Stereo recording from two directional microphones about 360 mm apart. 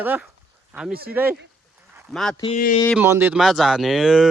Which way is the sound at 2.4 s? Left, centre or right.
Centre.